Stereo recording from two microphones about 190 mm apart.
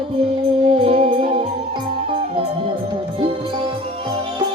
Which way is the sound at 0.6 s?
30° right (ahead or behind).